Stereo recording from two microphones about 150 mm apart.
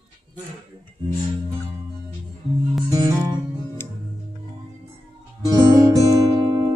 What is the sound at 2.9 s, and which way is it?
Music, 25° right (ahead or behind).